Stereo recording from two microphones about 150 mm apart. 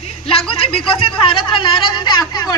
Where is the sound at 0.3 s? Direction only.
40° left (ahead or behind).